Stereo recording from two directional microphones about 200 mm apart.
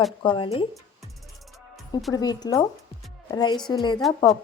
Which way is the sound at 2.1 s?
20° left (ahead or behind).